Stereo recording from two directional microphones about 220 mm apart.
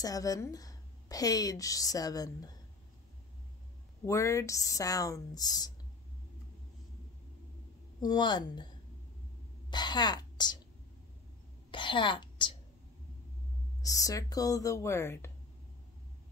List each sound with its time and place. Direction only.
0.0 s a woman's voice: 15° left (ahead or behind)
4.0 s a woman's voice: 15° left (ahead or behind)
8.0 s speech: 20° left (ahead or behind)
9.7 s a woman's voice: 20° left (ahead or behind)
11.7 s a woman's voice: 20° left (ahead or behind)
13.8 s a woman's voice: 15° left (ahead or behind)